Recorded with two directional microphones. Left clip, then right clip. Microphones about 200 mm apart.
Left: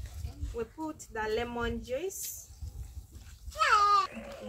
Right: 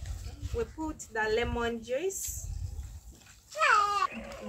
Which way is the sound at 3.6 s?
55° left (ahead or behind).